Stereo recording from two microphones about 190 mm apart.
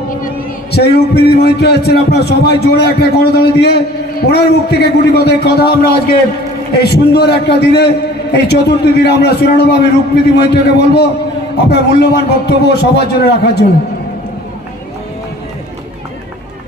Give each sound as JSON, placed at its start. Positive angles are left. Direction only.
{"t": 0.2, "sound": "a man's voice", "side_deg": 60}